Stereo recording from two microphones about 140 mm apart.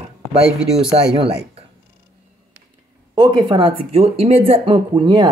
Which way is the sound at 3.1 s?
30° right (ahead or behind).